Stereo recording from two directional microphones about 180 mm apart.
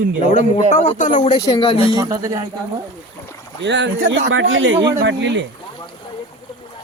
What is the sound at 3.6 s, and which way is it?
Speech, 80° right.